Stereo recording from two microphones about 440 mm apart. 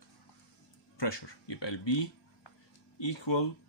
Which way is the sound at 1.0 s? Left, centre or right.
Left.